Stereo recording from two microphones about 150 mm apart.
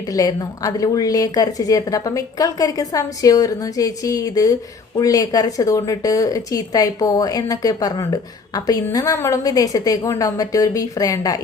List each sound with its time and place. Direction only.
0.1 s a woman's voice: 25° left (ahead or behind)